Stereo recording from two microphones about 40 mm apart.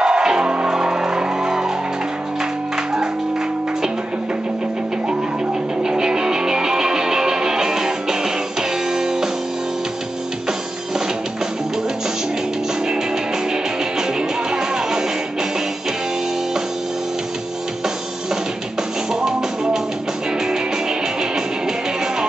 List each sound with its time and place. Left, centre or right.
0.0 s music: centre
5.8 s music: centre
14.5 s music: centre
19.2 s music: centre